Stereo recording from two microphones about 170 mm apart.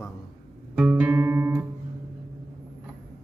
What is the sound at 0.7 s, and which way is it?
Music, 5° right (ahead or behind).